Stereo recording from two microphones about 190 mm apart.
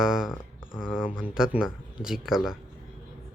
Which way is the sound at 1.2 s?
5° right (ahead or behind).